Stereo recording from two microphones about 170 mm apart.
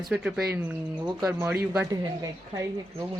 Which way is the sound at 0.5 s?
15° right (ahead or behind).